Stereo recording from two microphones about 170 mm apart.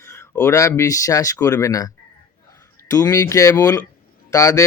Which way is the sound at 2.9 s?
20° left (ahead or behind).